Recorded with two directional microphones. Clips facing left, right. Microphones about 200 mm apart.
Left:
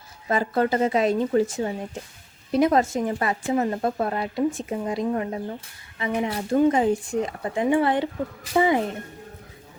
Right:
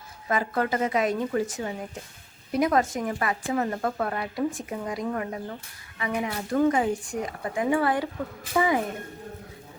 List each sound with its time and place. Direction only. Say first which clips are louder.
0.3 s speech: left 4 dB; 30° left (ahead or behind)